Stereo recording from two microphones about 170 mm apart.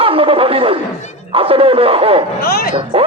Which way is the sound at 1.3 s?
35° right (ahead or behind).